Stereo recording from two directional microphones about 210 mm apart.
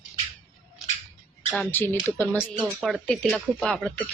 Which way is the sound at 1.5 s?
5° left (ahead or behind).